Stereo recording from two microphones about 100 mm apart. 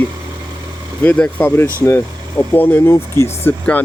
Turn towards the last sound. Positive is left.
turn(degrees=25)  # may be behind; listen again after turning